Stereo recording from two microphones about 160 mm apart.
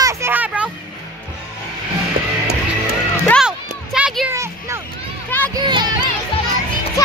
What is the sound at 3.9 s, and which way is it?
Children playing, 5° right (ahead or behind).